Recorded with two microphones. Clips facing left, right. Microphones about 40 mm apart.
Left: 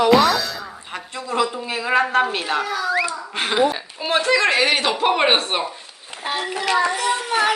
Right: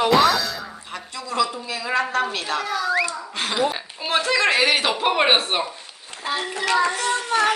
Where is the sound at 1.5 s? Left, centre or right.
Left.